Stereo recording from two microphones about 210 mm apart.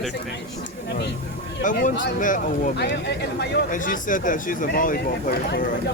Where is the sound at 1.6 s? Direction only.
40° left (ahead or behind).